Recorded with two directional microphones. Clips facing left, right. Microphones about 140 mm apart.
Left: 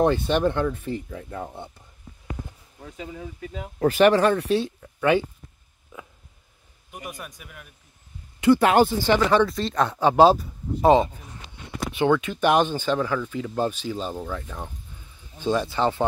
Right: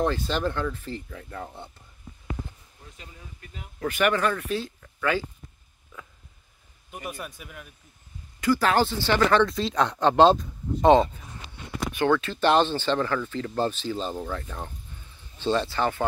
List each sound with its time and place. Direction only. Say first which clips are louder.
0.3 s speech: left 5 dB; 20° left (ahead or behind)
2.8 s speech: left 12 dB; 90° left
3.8 s speech: left 7 dB; 35° left (ahead or behind)
7.1 s speech: right 3 dB; 5° right (ahead or behind)
8.4 s speech: left 5 dB; 25° left (ahead or behind)
9.5 s speech: left 1 dB; centre (ahead or behind); by 16.0 s 20° left (ahead or behind)